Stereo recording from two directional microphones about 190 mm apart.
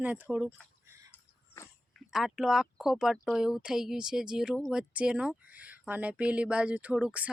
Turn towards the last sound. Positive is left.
turn(degrees=-5)  # may be behind; listen again after turning